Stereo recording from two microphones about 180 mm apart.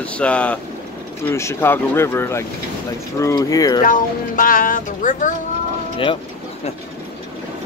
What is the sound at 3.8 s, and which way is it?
Speech, 50° left (ahead or behind).